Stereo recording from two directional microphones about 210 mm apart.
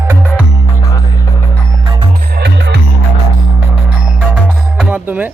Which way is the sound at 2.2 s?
45° right (ahead or behind).